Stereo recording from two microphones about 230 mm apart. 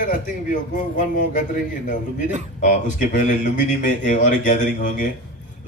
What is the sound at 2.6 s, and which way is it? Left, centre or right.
A man's voice, left.